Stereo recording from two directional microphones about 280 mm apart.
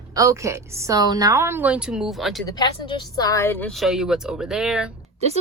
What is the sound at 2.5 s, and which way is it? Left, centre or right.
Speech, centre.